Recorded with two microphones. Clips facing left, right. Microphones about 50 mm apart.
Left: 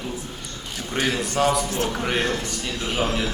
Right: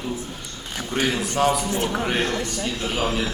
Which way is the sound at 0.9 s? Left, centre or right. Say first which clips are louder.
Even; right.